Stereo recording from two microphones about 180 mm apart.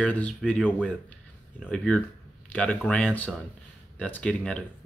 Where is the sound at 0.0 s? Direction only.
5° left (ahead or behind).